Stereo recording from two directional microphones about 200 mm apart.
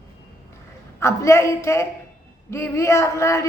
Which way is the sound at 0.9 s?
15° left (ahead or behind).